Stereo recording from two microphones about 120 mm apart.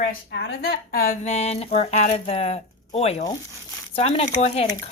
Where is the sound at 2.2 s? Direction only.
60° left (ahead or behind).